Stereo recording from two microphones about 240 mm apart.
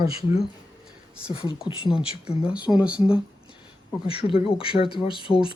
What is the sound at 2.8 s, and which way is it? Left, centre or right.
Speech, centre.